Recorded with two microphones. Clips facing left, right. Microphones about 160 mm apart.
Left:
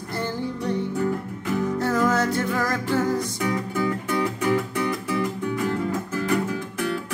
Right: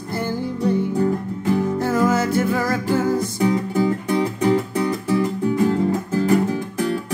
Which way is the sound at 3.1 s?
30° right (ahead or behind).